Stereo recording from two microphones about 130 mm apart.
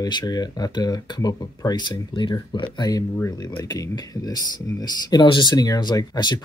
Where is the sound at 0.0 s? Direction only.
30° left (ahead or behind).